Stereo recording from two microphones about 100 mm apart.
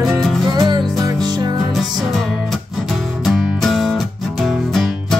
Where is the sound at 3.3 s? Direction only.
Centre (ahead or behind).